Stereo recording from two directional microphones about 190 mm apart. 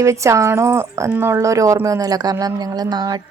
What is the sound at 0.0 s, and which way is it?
A woman's voice, 15° right (ahead or behind).